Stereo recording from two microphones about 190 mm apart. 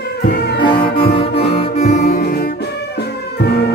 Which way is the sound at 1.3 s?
35° left (ahead or behind).